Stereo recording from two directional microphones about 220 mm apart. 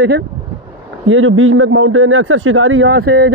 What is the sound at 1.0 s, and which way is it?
A man's voice, 65° right (ahead or behind).